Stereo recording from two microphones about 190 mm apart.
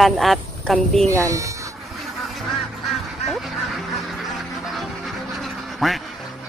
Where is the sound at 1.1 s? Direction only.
15° right (ahead or behind).